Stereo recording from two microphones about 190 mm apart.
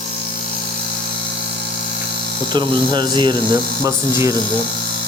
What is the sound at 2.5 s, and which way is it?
Speech, 25° right (ahead or behind).